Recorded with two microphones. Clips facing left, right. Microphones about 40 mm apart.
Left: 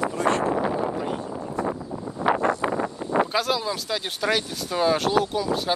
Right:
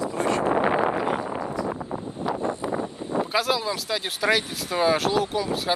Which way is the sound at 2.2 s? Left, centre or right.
Left.